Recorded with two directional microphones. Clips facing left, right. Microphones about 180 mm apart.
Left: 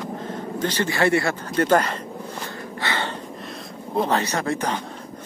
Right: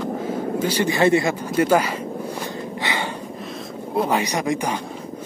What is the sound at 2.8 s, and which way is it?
Breathing, 15° right (ahead or behind).